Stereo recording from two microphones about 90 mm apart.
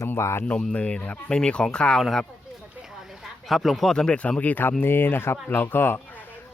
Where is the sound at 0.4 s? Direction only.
10° left (ahead or behind).